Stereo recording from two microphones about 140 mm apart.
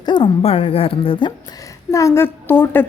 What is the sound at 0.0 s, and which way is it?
Speech, 35° left (ahead or behind).